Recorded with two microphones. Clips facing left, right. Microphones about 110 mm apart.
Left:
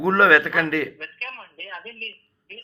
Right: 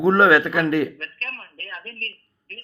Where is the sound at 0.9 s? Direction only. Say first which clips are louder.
Right 1 dB; 5° left (ahead or behind).